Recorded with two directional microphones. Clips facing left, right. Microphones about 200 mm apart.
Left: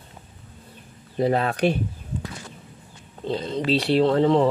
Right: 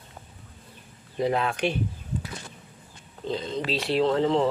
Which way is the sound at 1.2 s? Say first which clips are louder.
Left 4 dB; 40° left (ahead or behind).